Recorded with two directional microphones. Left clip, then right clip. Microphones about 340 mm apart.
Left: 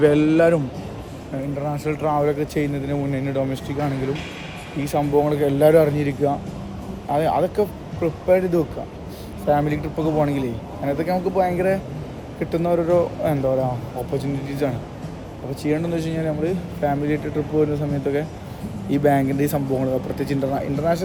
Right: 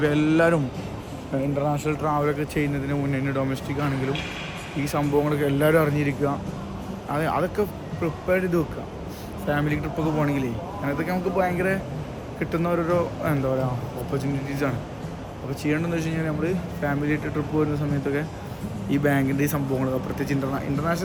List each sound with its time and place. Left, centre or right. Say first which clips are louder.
0.0 s speech: left 5 dB; centre
1.8 s speech: left 3 dB; centre